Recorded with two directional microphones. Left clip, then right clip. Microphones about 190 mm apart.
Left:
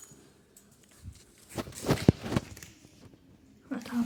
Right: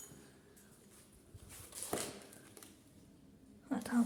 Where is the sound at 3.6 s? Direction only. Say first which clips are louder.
Left 2 dB; 10° right (ahead or behind).